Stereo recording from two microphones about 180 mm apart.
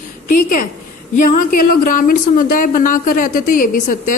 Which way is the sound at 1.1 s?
50° left (ahead or behind).